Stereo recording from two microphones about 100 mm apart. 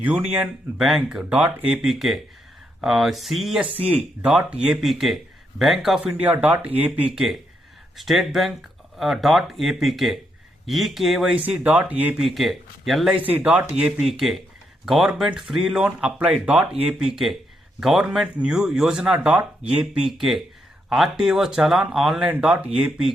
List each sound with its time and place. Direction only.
0.8 s speech: 5° right (ahead or behind)
1.7 s speech: 5° right (ahead or behind)
3.9 s speech: 10° right (ahead or behind)
6.2 s speech: 15° right (ahead or behind)
7.9 s speech: centre (ahead or behind)
11.4 s speech: 15° right (ahead or behind)
12.2 s speech: centre (ahead or behind)
13.2 s speech: 15° right (ahead or behind)
14.1 s speech: centre (ahead or behind)
17.0 s speech: 5° right (ahead or behind)
22.3 s speech: 15° right (ahead or behind)